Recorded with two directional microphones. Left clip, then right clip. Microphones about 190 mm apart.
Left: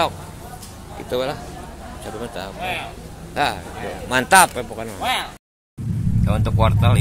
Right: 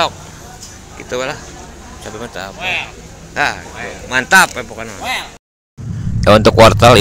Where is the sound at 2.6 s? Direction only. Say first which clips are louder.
Right 7 dB; 50° left (ahead or behind).